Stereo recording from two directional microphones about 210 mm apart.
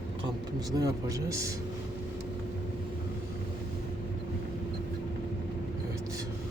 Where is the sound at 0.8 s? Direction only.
15° right (ahead or behind).